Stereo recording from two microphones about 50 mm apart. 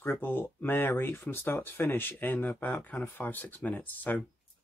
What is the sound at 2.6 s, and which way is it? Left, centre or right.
Speech, left.